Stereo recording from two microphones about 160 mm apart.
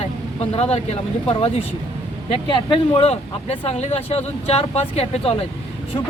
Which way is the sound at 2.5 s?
40° left (ahead or behind).